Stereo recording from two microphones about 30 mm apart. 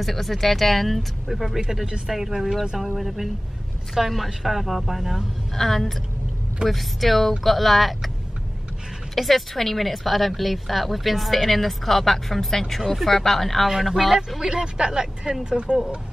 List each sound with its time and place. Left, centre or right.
0.0 s a woman's voice: centre
5.5 s a woman's voice: centre
9.1 s a woman's voice: centre
14.5 s speech: right
15.5 s speech: right